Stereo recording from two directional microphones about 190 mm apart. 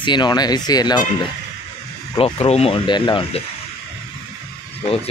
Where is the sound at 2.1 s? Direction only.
30° left (ahead or behind).